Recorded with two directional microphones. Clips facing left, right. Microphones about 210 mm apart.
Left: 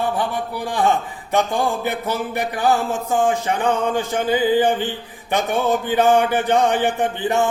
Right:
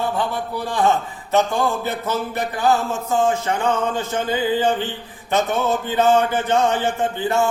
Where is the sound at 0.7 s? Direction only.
15° left (ahead or behind).